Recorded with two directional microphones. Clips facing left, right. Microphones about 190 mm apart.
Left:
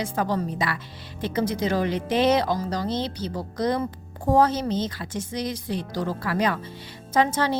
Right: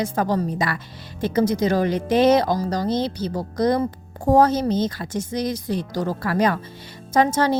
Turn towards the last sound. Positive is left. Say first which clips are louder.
# right 4 dB
turn(degrees=-45)  # may be behind; listen again after turning